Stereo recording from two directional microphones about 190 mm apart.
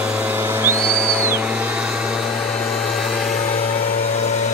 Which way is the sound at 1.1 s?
10° right (ahead or behind).